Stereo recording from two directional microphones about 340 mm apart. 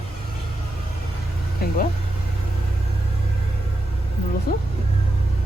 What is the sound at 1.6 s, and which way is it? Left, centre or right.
Vehicle, left.